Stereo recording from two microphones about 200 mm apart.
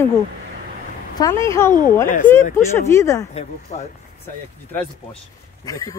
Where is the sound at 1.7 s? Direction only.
40° left (ahead or behind).